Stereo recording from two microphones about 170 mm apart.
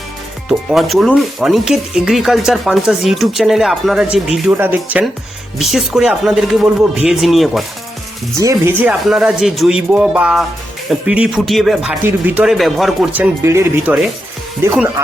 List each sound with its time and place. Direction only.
0.4 s speech: centre (ahead or behind)
4.5 s speech: 10° right (ahead or behind)
8.4 s speech: 15° right (ahead or behind)
13.4 s speech: 15° right (ahead or behind)